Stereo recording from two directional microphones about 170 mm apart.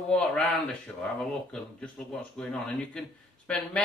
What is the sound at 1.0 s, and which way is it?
Speech, 5° left (ahead or behind).